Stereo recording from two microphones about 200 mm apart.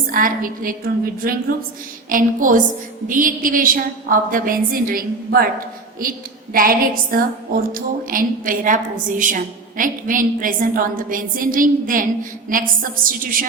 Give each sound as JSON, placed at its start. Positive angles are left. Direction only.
{"t": 0.1, "sound": "a woman's voice", "side_deg": -45}
{"t": 2.0, "sound": "a woman's voice", "side_deg": -40}